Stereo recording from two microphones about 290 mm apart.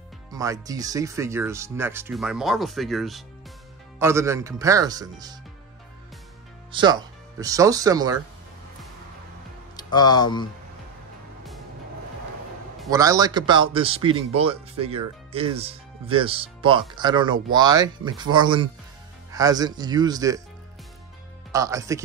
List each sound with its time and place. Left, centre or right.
0.3 s speech: centre
6.7 s speech: centre
9.8 s speech: centre
12.9 s speech: centre
21.5 s speech: centre